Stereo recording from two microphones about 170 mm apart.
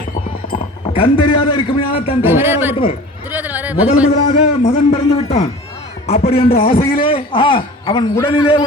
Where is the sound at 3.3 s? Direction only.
10° right (ahead or behind).